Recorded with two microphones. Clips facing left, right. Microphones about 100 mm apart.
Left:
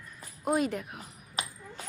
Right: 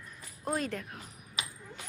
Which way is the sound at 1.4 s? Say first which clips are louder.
Left 4 dB; 40° left (ahead or behind).